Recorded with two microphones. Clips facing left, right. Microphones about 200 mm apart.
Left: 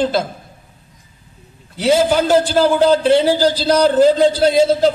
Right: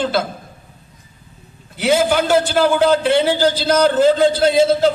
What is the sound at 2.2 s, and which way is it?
A man's voice, 35° left (ahead or behind).